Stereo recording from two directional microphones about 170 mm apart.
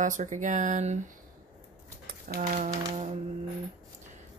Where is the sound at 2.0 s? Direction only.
55° right (ahead or behind).